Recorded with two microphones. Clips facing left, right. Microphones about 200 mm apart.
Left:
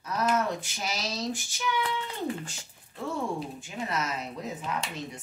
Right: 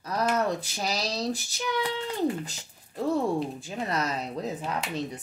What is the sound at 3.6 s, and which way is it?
Speech, 35° right (ahead or behind).